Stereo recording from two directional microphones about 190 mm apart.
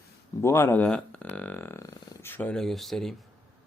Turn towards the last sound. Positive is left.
turn(degrees=0)  # may be behind; listen again after turning